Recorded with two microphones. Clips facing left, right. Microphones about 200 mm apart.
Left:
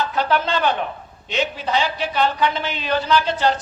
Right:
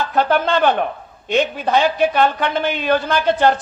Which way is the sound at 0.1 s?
50° right (ahead or behind).